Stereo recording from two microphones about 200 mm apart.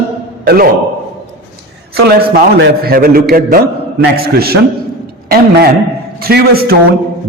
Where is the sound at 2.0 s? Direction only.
50° right (ahead or behind).